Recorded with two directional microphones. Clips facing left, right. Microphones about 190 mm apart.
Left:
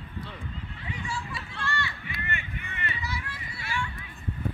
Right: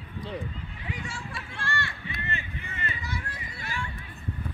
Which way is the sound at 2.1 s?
30° right (ahead or behind).